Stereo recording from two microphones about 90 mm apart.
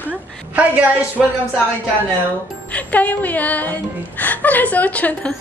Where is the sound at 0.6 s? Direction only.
15° right (ahead or behind).